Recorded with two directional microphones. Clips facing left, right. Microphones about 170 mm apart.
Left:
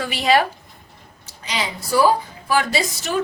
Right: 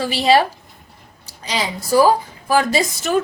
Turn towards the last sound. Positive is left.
turn(degrees=-45)  # may be behind; listen again after turning